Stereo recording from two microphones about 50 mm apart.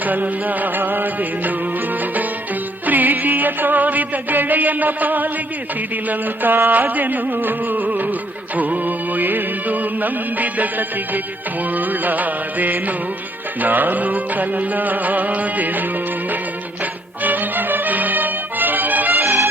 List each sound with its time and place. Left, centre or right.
0.0 s music: right
2.8 s music: right
17.2 s music: right